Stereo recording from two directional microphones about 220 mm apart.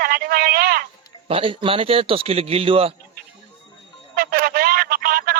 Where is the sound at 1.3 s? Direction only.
25° right (ahead or behind).